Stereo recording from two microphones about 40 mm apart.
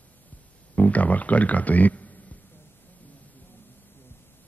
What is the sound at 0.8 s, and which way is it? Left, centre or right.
Speech, left.